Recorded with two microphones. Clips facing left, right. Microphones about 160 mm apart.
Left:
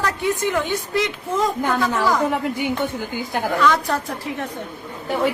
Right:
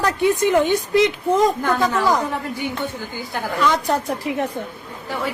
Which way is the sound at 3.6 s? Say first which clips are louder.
Right 1 dB; 20° right (ahead or behind).